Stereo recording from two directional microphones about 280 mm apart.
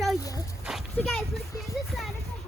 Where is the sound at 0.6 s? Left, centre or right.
Centre.